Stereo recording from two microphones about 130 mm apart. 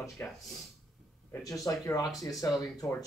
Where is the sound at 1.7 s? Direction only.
25° left (ahead or behind).